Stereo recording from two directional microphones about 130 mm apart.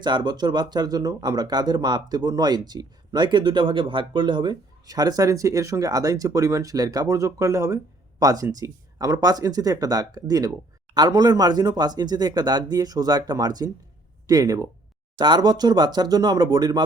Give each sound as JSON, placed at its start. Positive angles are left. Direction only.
{"t": 0.0, "sound": "speech", "side_deg": -35}